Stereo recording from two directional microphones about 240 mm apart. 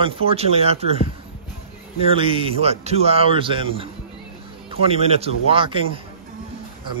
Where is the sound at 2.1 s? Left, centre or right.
Right.